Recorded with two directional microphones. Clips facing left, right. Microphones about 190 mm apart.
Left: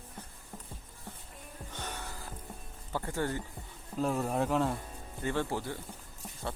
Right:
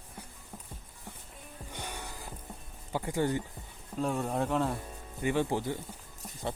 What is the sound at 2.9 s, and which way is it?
Speech, 15° right (ahead or behind).